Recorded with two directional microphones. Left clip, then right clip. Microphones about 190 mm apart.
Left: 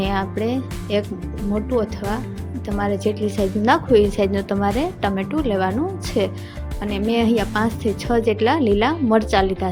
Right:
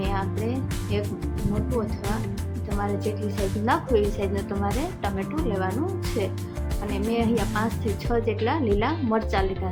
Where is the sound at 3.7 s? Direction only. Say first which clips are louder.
Left 7 dB; 45° left (ahead or behind).